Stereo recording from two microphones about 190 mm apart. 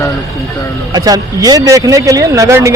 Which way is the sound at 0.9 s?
20° right (ahead or behind).